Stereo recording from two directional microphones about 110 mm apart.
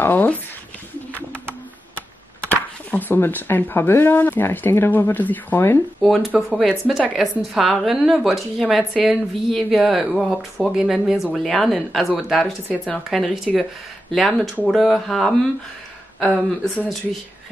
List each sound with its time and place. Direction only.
0.0 s speech: 15° left (ahead or behind)
2.5 s speech: 15° left (ahead or behind)
5.9 s a woman's voice: centre (ahead or behind)